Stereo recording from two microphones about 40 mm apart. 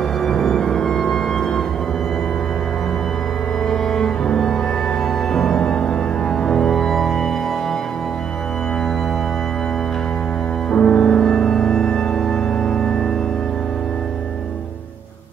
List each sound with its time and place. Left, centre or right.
0.2 s music: centre
3.6 s cello: centre
5.3 s music: centre
10.7 s organ: centre